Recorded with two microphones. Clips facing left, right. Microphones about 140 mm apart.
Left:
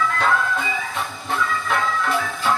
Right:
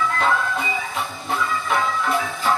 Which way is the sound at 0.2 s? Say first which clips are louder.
Even; centre (ahead or behind).